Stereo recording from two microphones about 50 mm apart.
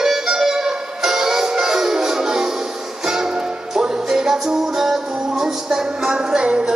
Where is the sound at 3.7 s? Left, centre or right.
Centre.